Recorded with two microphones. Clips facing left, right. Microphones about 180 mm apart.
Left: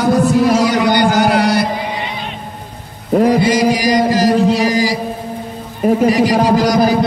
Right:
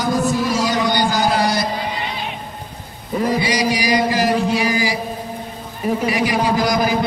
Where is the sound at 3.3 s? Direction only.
50° left (ahead or behind).